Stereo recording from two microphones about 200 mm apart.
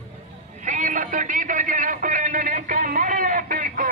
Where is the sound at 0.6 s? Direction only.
40° right (ahead or behind).